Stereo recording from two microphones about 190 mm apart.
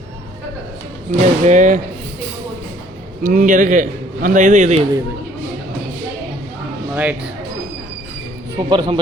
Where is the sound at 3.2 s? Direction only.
45° right (ahead or behind).